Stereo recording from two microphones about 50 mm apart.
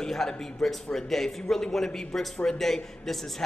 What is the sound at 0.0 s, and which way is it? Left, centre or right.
A man's voice, centre.